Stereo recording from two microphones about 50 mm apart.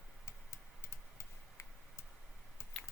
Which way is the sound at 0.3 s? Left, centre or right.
Left.